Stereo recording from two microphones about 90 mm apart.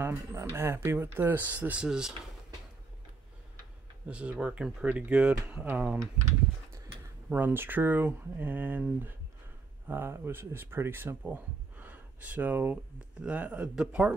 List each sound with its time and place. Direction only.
0.3 s speech: 25° right (ahead or behind); by 2.1 s 5° right (ahead or behind)
4.1 s speech: 15° right (ahead or behind)
7.2 s speech: 20° right (ahead or behind)